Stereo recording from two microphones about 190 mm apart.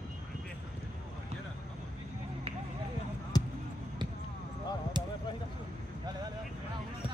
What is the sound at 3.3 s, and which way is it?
Basketball bounce, 20° left (ahead or behind).